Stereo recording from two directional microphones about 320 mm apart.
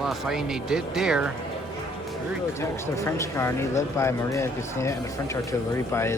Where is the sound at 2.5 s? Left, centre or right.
Centre.